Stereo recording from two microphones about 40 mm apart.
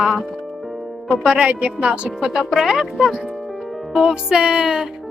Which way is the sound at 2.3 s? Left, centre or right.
Centre.